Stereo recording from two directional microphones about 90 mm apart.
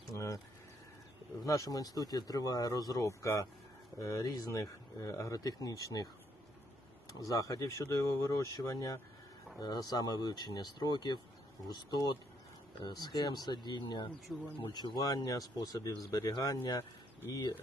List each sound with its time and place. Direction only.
1.5 s speech: 35° left (ahead or behind)
7.1 s speech: 40° left (ahead or behind)
14.3 s speech: centre (ahead or behind)
14.7 s speech: 50° left (ahead or behind)